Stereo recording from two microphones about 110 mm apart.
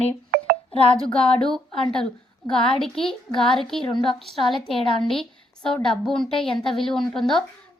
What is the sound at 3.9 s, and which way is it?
Speech, 45° left (ahead or behind).